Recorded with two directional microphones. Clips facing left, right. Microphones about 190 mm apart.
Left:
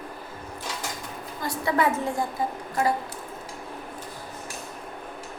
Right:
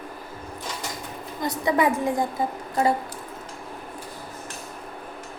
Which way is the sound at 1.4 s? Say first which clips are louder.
Right 2 dB; 15° right (ahead or behind).